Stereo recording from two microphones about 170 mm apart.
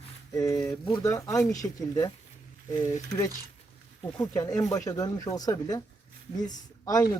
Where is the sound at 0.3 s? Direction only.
20° left (ahead or behind).